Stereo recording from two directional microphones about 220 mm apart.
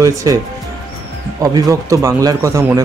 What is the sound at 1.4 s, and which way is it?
Speech, 15° right (ahead or behind).